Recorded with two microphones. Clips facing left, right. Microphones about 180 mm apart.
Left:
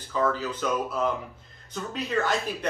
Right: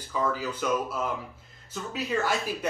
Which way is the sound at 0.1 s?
10° right (ahead or behind).